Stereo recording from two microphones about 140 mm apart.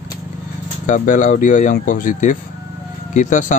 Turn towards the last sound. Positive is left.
turn(degrees=65)  # may be behind; listen again after turning